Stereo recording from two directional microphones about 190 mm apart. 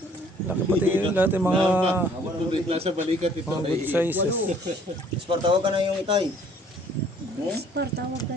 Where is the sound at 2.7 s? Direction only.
30° right (ahead or behind).